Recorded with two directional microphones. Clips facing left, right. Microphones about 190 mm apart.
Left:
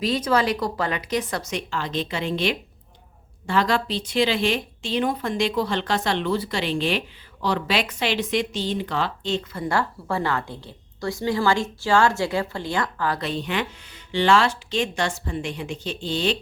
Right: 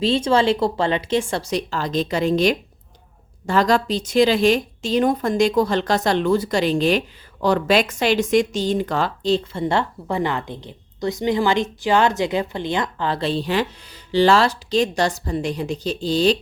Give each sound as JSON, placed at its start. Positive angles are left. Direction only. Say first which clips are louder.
{"t": 0.0, "sound": "a woman's voice", "louder": "right 4 dB", "side_deg": -25}